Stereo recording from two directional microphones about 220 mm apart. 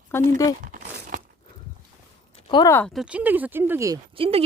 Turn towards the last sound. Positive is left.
turn(degrees=-25)  # may be behind; listen again after turning